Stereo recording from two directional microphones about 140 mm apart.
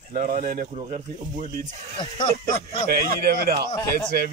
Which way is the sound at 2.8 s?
90° right.